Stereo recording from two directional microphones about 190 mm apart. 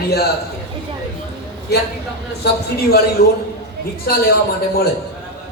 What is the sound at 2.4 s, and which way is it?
Speech, 55° left (ahead or behind).